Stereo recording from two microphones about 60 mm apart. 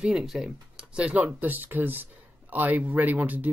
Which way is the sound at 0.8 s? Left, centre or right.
Centre.